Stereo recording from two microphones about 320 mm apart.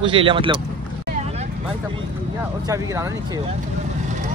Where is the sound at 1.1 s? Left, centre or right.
Right.